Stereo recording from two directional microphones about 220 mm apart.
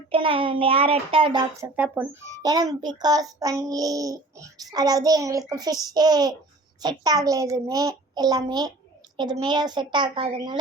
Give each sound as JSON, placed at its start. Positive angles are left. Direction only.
{"t": 0.1, "sound": "a child's voice", "side_deg": -25}
{"t": 1.7, "sound": "a child's voice", "side_deg": -10}